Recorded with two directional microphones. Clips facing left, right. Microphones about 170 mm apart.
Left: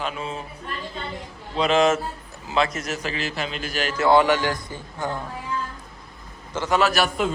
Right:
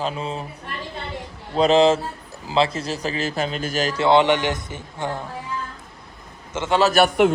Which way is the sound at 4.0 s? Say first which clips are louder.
Right 1 dB; 20° right (ahead or behind).